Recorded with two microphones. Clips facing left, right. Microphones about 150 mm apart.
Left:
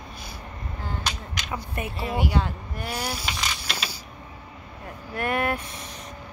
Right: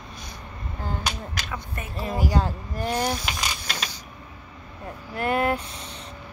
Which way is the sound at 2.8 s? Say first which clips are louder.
Right 6 dB; 10° left (ahead or behind).